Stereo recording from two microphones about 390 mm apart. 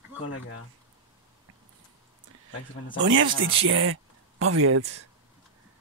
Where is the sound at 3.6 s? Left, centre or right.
Right.